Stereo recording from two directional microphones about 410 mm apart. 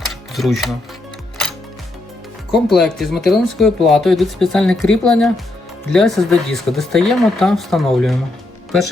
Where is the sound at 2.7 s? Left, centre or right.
Centre.